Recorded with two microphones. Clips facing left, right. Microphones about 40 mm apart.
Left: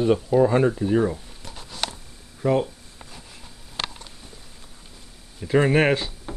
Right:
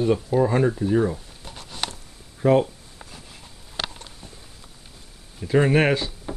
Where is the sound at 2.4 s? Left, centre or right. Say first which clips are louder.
Right 3 dB; centre.